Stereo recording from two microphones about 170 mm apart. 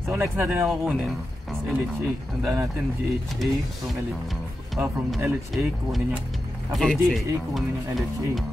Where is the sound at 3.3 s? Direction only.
Centre (ahead or behind).